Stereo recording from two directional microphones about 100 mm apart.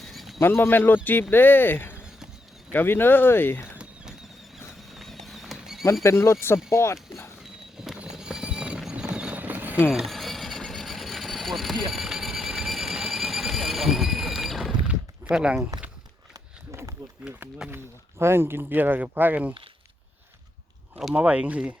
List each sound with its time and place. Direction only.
0.0 s a sound: centre (ahead or behind)
0.3 s speech: 25° left (ahead or behind)
2.0 s a sound: 5° right (ahead or behind)
2.7 s speech: 20° left (ahead or behind)
4.9 s horse: centre (ahead or behind)
5.8 s speech: 30° left (ahead or behind)
7.8 s clip-clop: 5° right (ahead or behind)
9.9 s vehicle: centre (ahead or behind)
16.3 s a sound: 30° right (ahead or behind)
17.6 s speech: 5° right (ahead or behind)
18.2 s speech: 25° right (ahead or behind)
21.1 s speech: 15° right (ahead or behind)